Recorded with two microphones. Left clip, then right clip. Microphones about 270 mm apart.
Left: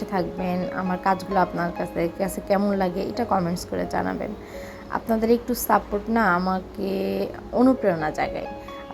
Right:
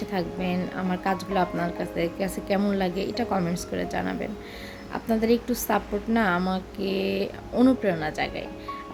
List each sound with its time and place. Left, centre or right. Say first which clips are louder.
0.4 s a woman's voice: left 3 dB; centre
6.8 s speech: even; left
7.5 s a woman's voice: left 3 dB; centre